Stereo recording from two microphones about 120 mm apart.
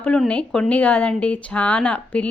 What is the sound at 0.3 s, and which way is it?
Speech, 10° left (ahead or behind).